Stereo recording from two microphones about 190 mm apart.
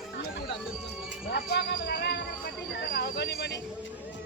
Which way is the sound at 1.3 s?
60° left (ahead or behind).